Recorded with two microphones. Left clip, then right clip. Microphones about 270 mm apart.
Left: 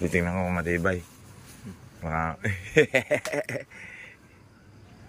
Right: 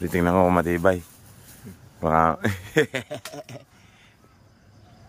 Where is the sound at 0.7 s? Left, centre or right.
Centre.